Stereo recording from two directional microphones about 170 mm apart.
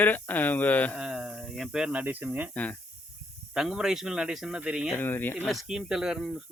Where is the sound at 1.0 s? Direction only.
5° right (ahead or behind).